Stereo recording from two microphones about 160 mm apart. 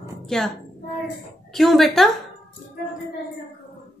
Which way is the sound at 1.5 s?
Centre (ahead or behind).